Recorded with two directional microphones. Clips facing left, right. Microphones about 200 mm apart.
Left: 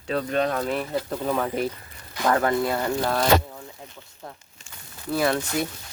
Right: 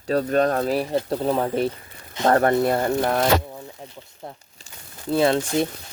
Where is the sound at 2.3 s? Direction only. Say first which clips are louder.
Right 4 dB; 40° right (ahead or behind).